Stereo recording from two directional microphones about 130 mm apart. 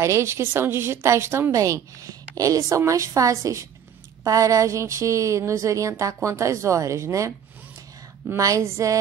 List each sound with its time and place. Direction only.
0.0 s a woman's voice: 20° right (ahead or behind)